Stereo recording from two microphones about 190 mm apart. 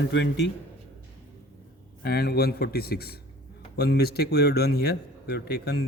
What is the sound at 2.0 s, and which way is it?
A man's voice, 55° left (ahead or behind).